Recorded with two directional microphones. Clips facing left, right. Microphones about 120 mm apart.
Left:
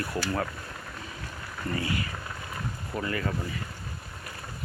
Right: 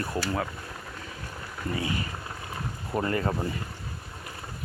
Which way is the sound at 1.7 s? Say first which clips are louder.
Even; 15° right (ahead or behind).